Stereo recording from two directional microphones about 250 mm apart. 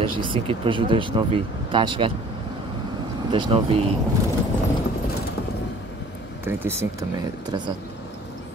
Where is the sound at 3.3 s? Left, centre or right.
Right.